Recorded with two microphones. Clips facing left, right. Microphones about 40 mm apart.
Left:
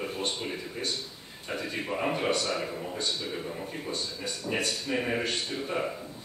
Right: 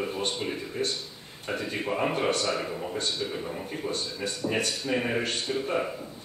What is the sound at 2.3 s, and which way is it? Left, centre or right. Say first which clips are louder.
Speech: right 1 dB; right.